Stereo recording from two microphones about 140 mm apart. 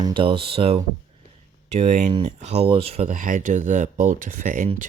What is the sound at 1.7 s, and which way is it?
Speech, 55° right (ahead or behind).